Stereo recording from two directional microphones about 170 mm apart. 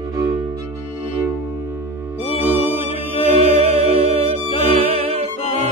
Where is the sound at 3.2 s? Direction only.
35° right (ahead or behind).